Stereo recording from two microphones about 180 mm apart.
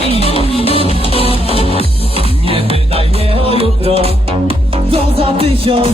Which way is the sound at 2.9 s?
30° right (ahead or behind).